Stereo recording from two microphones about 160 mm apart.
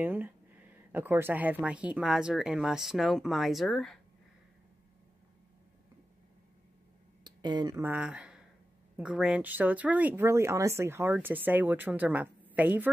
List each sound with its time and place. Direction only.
0.0 s speech: 10° right (ahead or behind)
7.2 s speech: 25° right (ahead or behind)
7.8 s a woman's voice: 10° right (ahead or behind)